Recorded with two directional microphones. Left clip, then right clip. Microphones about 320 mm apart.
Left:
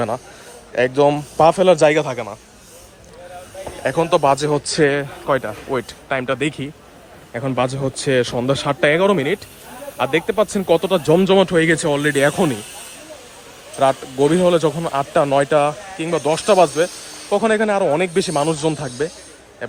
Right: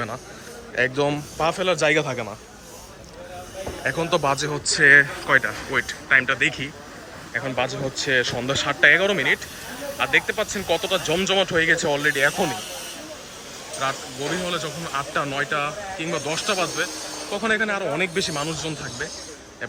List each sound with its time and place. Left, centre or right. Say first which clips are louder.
0.8 s speech: left 7 dB; centre
3.8 s speech: left 7 dB; centre
13.8 s speech: left 11 dB; centre